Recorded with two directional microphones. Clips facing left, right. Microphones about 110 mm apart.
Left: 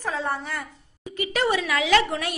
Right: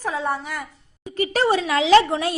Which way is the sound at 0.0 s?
10° right (ahead or behind).